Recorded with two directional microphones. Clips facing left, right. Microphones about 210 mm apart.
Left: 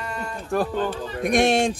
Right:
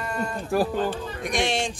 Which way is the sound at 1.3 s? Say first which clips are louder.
Left 7 dB; 55° left (ahead or behind).